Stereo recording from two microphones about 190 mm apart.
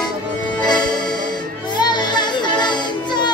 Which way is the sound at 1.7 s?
25° left (ahead or behind).